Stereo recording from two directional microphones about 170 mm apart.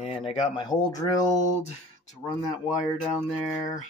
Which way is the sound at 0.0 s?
35° left (ahead or behind).